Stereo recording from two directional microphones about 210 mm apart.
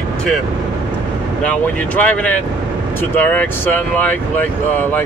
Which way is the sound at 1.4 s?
5° left (ahead or behind).